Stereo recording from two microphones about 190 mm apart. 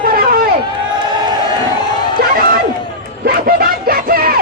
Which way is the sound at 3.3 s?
50° right (ahead or behind).